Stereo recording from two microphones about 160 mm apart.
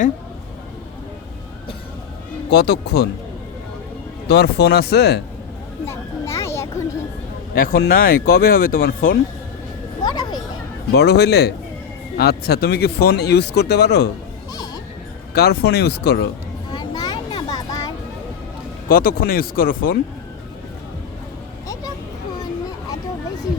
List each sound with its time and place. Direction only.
2.5 s speech: 90° left
4.3 s speech: 90° left
5.8 s a sound: 15° left (ahead or behind)
7.5 s speech: 65° left (ahead or behind)
10.0 s a sound: 25° left (ahead or behind)
10.9 s speech: 90° left
12.1 s speech: 80° left
15.4 s speech: 90° left
16.7 s a sound: 25° left (ahead or behind)
18.9 s speech: 65° left (ahead or behind)